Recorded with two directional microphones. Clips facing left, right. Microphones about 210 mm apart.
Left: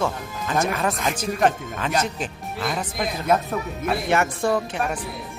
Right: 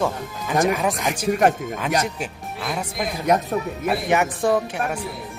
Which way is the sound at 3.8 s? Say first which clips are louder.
Even; 15° right (ahead or behind).